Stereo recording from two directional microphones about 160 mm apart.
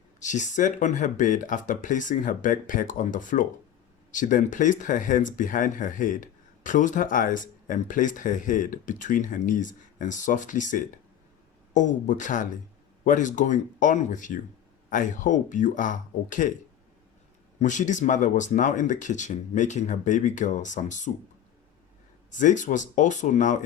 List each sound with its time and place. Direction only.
0.2 s speech: 50° left (ahead or behind)
17.6 s speech: 50° left (ahead or behind)
22.3 s speech: 50° left (ahead or behind)